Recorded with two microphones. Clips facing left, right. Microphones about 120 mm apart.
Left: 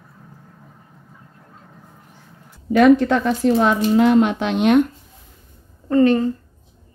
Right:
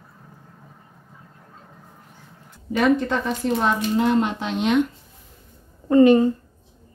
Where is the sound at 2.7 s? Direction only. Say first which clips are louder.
Left 7 dB; 85° left; by 4.9 s 55° left (ahead or behind).